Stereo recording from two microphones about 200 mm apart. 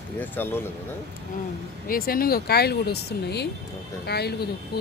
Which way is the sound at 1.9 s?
45° left (ahead or behind).